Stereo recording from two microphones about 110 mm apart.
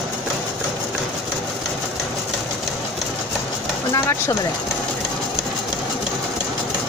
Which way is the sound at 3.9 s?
25° left (ahead or behind).